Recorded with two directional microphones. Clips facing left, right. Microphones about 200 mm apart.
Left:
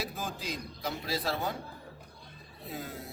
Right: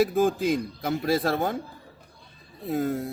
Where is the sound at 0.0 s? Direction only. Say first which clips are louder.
Right 16 dB; 50° right (ahead or behind).